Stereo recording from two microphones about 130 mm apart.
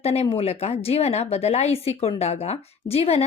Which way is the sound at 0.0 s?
50° left (ahead or behind).